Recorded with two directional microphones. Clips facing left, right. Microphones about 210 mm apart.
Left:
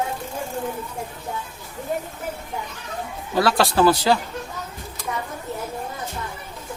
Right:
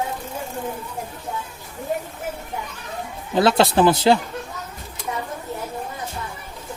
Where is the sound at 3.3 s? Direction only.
20° right (ahead or behind).